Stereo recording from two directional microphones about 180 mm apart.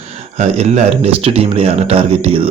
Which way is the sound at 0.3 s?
40° right (ahead or behind).